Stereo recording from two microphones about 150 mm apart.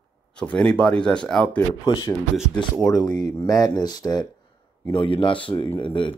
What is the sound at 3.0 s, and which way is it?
Speech, 25° left (ahead or behind).